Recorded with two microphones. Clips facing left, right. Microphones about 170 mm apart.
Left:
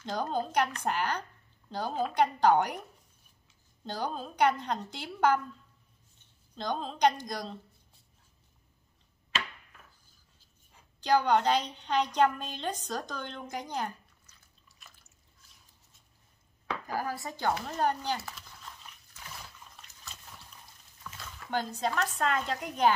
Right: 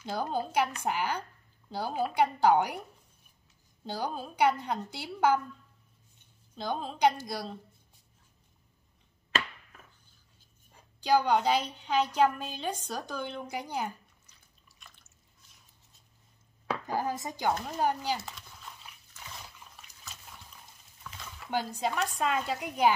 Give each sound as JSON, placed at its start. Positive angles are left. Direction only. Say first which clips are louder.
{"t": 0.0, "sound": "a woman's voice", "louder": "even", "side_deg": -10}
{"t": 3.8, "sound": "a woman's voice", "louder": "even", "side_deg": -10}
{"t": 6.5, "sound": "a woman's voice", "louder": "even", "side_deg": -5}
{"t": 11.0, "sound": "a woman's voice", "louder": "even", "side_deg": -10}
{"t": 14.8, "sound": "drip", "louder": "right 1 dB", "side_deg": 5}
{"t": 16.8, "sound": "a woman's voice", "louder": "right 2 dB", "side_deg": -20}
{"t": 19.6, "sound": "water", "louder": "even", "side_deg": -10}
{"t": 21.0, "sound": "speech", "louder": "even", "side_deg": -10}